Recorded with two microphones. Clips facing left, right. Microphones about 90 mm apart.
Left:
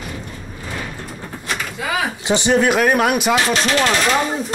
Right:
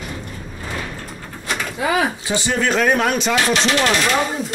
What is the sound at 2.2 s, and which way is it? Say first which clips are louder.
Speech: left 5 dB; 20° left (ahead or behind).